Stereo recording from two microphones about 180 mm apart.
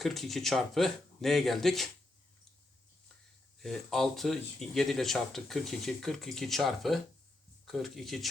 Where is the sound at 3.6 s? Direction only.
Centre (ahead or behind).